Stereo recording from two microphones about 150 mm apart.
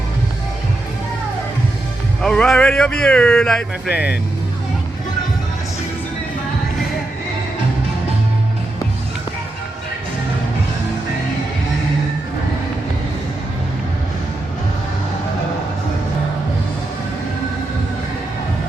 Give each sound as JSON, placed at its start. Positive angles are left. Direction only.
{"t": 2.2, "sound": "speech", "side_deg": 5}